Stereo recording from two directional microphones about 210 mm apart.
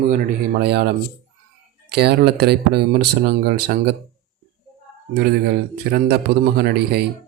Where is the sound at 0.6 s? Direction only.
50° right (ahead or behind).